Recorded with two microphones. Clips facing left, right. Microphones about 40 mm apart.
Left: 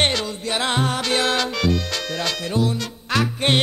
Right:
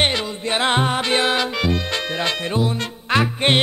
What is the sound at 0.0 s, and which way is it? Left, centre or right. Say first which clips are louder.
Music: right 1 dB; centre.